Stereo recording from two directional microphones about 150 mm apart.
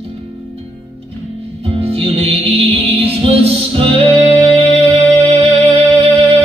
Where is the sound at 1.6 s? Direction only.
40° right (ahead or behind).